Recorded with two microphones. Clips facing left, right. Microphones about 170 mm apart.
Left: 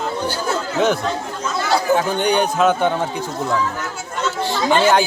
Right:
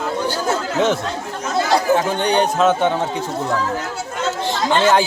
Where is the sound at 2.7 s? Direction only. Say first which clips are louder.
Right 1 dB; 25° right (ahead or behind).